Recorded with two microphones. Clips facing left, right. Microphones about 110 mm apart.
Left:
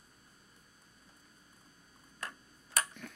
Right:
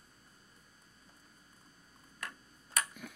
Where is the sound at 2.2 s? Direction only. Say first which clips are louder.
Left 1 dB; 35° left (ahead or behind).